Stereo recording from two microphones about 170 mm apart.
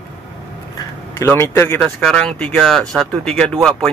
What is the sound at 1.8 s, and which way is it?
Speech, 5° left (ahead or behind).